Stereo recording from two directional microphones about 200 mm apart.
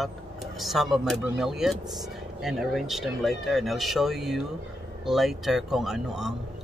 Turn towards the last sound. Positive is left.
turn(degrees=0)  # may be behind; listen again after turning